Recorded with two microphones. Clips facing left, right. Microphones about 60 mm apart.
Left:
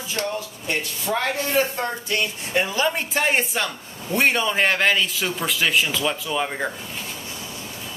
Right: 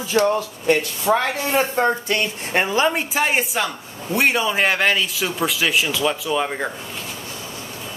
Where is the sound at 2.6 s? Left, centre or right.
Right.